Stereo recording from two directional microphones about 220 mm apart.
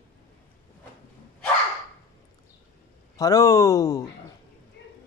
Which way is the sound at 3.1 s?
15° left (ahead or behind).